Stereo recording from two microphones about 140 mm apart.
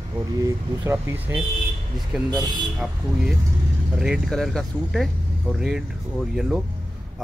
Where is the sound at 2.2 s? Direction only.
30° right (ahead or behind).